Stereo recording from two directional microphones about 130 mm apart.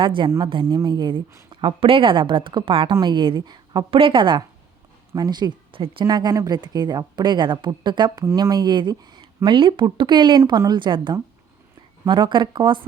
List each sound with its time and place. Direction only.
0.0 s speech: 40° right (ahead or behind)